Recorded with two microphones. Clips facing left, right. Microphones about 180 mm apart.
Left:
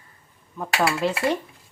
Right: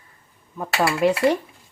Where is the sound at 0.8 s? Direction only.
15° right (ahead or behind).